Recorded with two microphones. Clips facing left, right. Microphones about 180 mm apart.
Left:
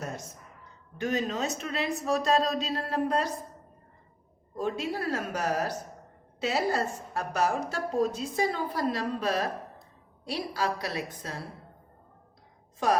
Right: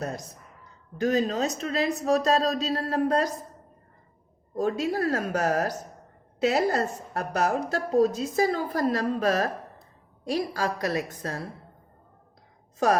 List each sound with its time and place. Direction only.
0.0 s a woman's voice: 35° right (ahead or behind)
4.5 s a woman's voice: 40° right (ahead or behind)